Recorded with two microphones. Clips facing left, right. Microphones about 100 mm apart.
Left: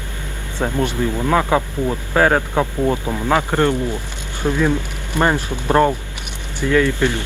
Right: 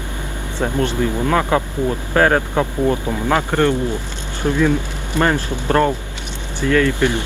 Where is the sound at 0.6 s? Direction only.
15° left (ahead or behind).